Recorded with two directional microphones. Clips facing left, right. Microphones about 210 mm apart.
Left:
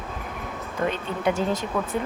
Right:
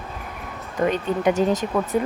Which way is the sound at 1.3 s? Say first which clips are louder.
Right 6 dB; 45° right (ahead or behind).